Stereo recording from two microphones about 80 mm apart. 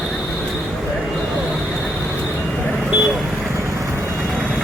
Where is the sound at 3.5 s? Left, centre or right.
Right.